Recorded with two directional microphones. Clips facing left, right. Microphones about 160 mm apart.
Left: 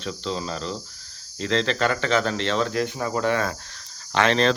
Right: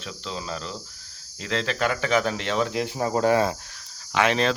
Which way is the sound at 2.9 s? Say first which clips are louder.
Right 7 dB; 30° right (ahead or behind).